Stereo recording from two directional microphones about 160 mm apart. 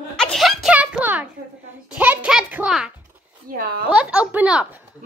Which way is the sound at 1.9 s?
5° right (ahead or behind).